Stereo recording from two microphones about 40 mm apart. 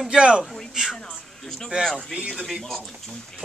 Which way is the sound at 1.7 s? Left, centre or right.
Right.